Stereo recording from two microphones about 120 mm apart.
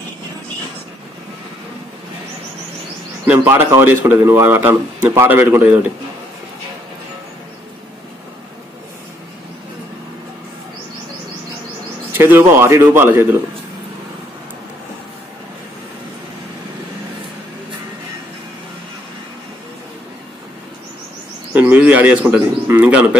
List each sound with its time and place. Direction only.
3.3 s a man's voice: 20° right (ahead or behind)
12.1 s a man's voice: 20° right (ahead or behind)
21.5 s a man's voice: 15° right (ahead or behind)